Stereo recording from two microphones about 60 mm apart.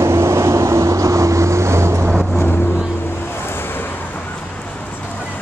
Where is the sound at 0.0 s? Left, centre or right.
Right.